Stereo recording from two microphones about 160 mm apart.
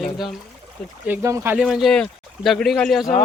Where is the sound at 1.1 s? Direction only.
15° right (ahead or behind).